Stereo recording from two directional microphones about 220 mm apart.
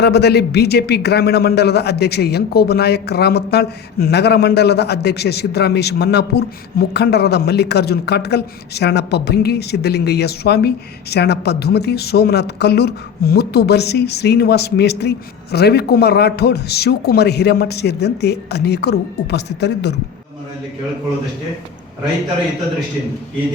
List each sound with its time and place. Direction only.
0.0 s a man's voice: 50° left (ahead or behind)